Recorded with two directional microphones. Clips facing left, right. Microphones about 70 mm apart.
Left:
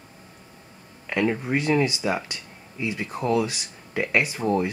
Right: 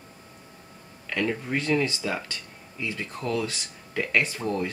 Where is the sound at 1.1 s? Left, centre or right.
Left.